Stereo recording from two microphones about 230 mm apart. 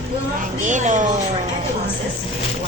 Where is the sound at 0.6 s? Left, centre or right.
Right.